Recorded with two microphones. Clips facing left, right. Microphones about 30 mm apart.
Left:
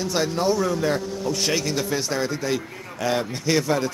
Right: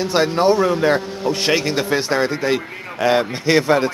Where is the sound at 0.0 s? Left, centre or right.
Right.